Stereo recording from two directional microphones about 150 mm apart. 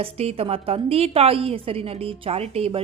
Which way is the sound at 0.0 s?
40° right (ahead or behind).